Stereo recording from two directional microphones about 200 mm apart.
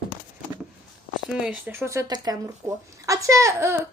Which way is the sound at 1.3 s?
5° right (ahead or behind).